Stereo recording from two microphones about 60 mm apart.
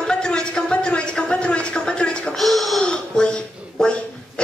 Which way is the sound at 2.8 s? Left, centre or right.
Centre.